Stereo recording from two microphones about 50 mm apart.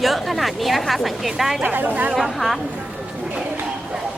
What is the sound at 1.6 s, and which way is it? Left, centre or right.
Speech, right.